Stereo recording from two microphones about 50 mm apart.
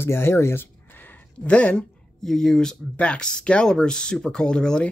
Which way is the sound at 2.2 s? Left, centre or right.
Centre.